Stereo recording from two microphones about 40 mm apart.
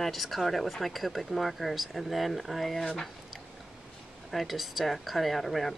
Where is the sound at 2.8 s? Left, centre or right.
Centre.